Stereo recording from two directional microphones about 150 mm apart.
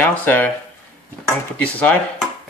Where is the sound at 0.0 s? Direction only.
10° left (ahead or behind).